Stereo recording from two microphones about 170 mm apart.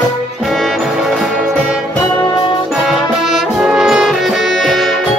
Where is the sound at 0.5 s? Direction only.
Centre (ahead or behind).